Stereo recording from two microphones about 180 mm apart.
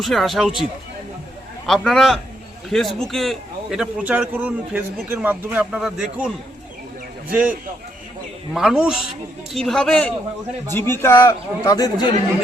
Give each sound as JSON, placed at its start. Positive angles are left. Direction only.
{"t": 0.0, "sound": "a man's voice", "side_deg": 0}
{"t": 8.5, "sound": "a man's voice", "side_deg": -5}